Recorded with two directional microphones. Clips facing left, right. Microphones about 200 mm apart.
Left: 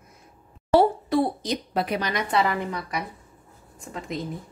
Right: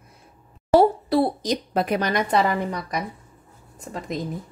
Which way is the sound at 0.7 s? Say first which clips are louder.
Right 2 dB; 40° right (ahead or behind).